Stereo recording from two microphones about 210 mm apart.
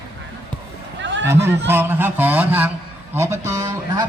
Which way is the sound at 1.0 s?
60° right (ahead or behind).